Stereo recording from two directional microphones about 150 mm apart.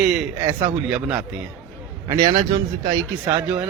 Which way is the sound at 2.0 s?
25° right (ahead or behind).